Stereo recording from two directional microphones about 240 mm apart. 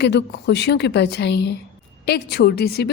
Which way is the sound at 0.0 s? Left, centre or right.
Left.